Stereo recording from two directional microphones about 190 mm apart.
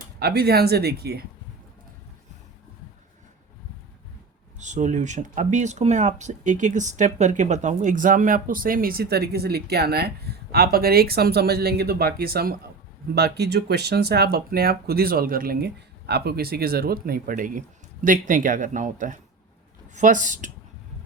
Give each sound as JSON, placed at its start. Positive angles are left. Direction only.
{"t": 0.2, "sound": "speech", "side_deg": -55}
{"t": 4.5, "sound": "speech", "side_deg": -40}